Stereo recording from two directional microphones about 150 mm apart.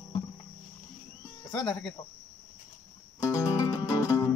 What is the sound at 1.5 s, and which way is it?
Speech, 30° left (ahead or behind).